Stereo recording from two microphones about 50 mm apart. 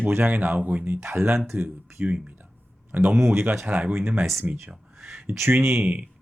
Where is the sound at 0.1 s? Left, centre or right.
Right.